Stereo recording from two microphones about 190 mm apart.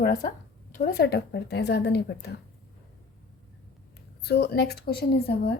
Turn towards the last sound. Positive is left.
turn(degrees=55)  # may be behind; listen again after turning